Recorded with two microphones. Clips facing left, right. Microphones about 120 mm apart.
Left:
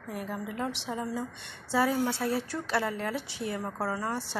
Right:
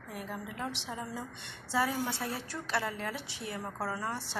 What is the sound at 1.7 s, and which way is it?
A woman's voice, 25° left (ahead or behind).